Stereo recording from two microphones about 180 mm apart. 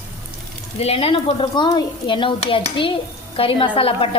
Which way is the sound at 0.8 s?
35° left (ahead or behind).